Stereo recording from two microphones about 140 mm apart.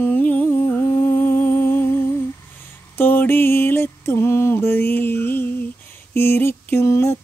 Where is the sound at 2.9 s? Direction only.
15° left (ahead or behind).